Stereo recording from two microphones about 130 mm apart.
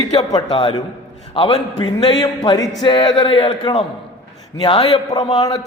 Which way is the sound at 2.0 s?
30° left (ahead or behind).